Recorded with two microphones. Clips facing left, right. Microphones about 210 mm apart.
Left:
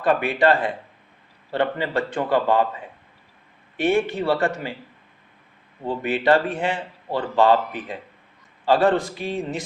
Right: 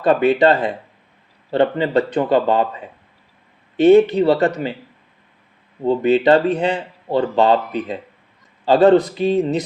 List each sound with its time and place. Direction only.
0.0 s speech: 25° right (ahead or behind)
3.8 s speech: 20° right (ahead or behind)
5.9 s a man's voice: 25° right (ahead or behind)